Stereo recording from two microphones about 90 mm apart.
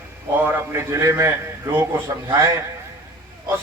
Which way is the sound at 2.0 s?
40° right (ahead or behind).